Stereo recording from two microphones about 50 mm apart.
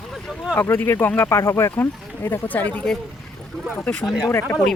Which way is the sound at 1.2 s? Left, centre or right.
Left.